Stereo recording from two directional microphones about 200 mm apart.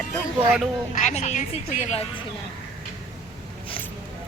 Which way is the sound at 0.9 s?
35° left (ahead or behind).